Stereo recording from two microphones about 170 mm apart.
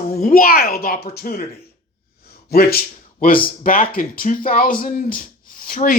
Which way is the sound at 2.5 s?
60° left (ahead or behind).